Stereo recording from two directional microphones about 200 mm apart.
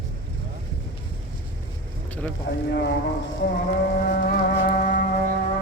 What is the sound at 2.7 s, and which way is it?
Speech, 55° left (ahead or behind).